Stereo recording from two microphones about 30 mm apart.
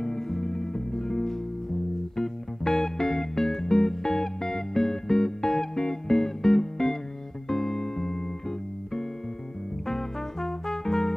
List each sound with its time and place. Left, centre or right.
0.0 s music: centre